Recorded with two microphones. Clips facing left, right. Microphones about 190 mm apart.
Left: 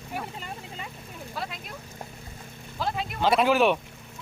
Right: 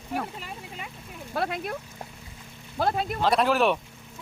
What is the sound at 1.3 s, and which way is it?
Speech, 60° right (ahead or behind).